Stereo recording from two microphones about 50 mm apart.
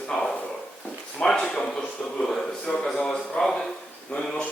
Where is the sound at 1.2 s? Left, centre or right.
Centre.